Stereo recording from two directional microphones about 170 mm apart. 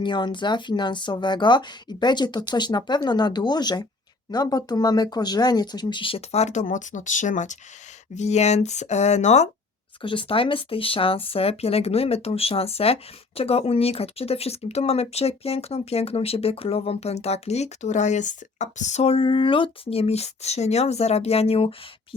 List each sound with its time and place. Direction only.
0.0 s speech: 25° left (ahead or behind); by 9.5 s 40° left (ahead or behind)
10.0 s speech: 30° left (ahead or behind)